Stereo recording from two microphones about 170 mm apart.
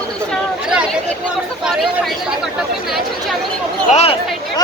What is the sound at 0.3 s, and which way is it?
Chatter, 5° right (ahead or behind).